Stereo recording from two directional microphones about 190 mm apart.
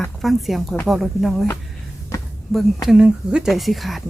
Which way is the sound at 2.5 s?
Centre (ahead or behind).